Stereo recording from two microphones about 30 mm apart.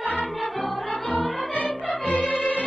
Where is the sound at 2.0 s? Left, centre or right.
Left.